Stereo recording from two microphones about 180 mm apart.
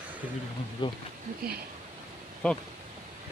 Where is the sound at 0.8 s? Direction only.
25° left (ahead or behind).